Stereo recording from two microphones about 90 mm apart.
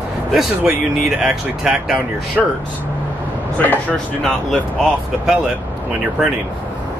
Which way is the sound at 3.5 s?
20° left (ahead or behind).